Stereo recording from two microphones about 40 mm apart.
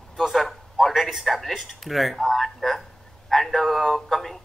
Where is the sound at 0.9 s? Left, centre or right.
Centre.